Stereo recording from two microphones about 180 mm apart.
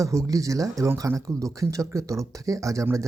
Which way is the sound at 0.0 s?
15° right (ahead or behind).